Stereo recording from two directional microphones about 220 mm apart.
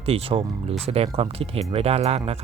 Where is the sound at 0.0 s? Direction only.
25° right (ahead or behind).